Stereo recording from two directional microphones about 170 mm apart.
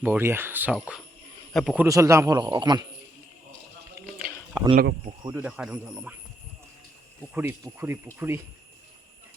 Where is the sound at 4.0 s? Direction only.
15° right (ahead or behind).